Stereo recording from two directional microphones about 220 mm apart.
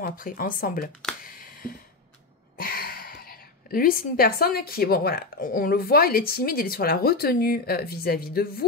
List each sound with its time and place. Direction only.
0.0 s speech: 40° left (ahead or behind)
1.2 s a sound: 40° left (ahead or behind)
2.5 s a woman's voice: 40° left (ahead or behind)